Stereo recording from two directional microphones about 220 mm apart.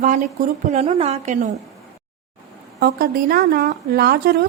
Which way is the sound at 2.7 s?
45° right (ahead or behind).